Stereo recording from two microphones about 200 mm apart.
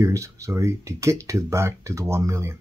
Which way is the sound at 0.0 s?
15° right (ahead or behind).